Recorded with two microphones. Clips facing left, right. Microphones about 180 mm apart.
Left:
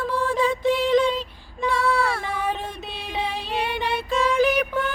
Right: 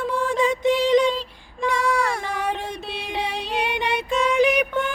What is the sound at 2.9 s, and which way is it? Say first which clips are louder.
Music: even; centre (ahead or behind).